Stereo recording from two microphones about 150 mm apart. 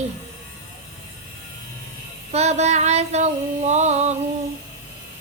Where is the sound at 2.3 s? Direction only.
45° right (ahead or behind).